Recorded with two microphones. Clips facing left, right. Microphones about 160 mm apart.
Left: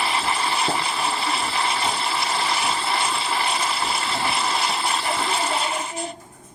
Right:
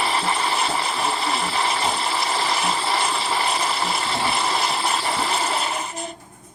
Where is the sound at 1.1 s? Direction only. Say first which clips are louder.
Right 1 dB; 25° right (ahead or behind).